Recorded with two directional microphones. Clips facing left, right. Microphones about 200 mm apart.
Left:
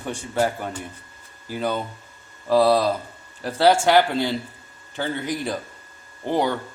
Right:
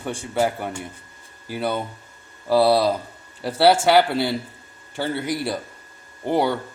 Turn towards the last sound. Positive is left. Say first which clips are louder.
# right 2 dB
turn(degrees=-10)  # may be behind; listen again after turning